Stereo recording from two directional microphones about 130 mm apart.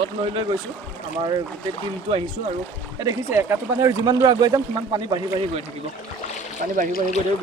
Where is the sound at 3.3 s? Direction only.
15° right (ahead or behind).